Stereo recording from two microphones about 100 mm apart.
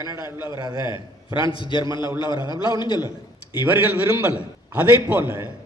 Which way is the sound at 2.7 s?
50° left (ahead or behind).